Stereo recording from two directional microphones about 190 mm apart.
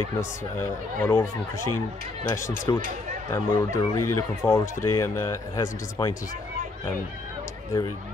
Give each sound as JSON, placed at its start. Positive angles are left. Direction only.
{"t": 0.2, "sound": "speech", "side_deg": 10}